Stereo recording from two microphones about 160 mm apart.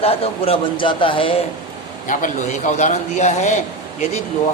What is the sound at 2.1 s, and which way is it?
Speech, 50° left (ahead or behind).